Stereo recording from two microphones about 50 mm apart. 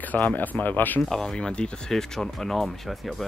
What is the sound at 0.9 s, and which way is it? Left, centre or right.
Speech, centre.